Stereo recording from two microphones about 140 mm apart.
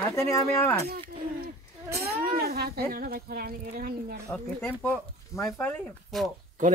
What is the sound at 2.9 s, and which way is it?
Speech, 90° right.